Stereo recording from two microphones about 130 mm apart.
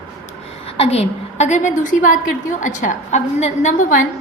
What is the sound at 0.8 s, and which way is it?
A woman's voice, 50° left (ahead or behind).